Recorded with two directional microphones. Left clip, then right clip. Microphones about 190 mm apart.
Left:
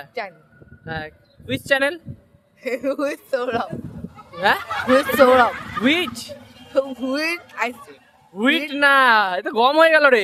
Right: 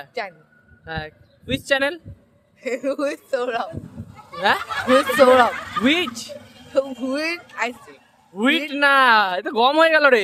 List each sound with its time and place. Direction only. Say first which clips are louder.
0.0 s speech: even; centre (ahead or behind)
4.7 s speech: even; 45° right (ahead or behind)
5.1 s speech: even; centre (ahead or behind)